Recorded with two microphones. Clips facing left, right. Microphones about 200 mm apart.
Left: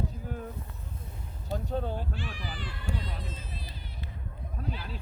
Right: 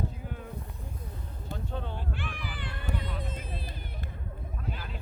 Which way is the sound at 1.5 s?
40° left (ahead or behind).